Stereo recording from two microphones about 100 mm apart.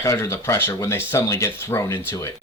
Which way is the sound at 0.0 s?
30° left (ahead or behind).